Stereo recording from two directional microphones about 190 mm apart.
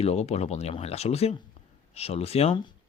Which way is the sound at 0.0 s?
35° left (ahead or behind).